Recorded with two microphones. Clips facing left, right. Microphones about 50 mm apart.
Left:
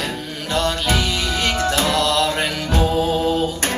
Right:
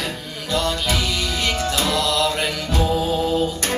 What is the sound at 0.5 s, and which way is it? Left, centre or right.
Music, left.